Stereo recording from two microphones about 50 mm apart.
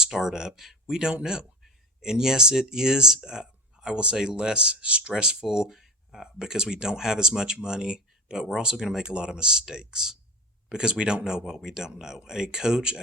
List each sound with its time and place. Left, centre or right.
0.0 s speech: centre